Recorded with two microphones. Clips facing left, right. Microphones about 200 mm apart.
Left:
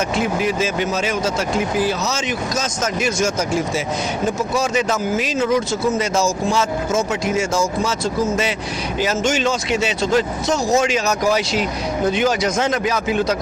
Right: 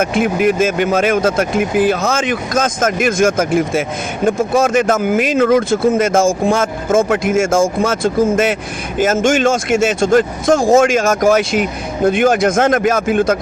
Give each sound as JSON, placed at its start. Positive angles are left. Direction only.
{"t": 0.0, "sound": "speech", "side_deg": -55}